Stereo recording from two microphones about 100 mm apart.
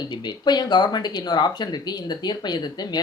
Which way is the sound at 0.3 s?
45° left (ahead or behind).